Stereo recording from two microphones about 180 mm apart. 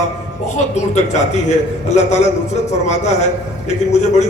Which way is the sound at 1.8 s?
40° left (ahead or behind).